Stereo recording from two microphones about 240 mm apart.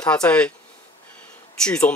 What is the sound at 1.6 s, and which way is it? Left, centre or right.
Speech, centre.